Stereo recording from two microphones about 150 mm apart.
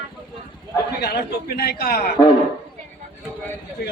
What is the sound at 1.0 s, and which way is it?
A man's voice, 90° left.